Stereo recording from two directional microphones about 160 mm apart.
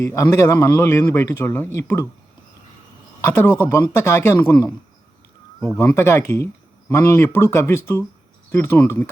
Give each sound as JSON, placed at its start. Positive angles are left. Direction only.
{"t": 0.0, "sound": "speech", "side_deg": 20}
{"t": 3.2, "sound": "speech", "side_deg": 15}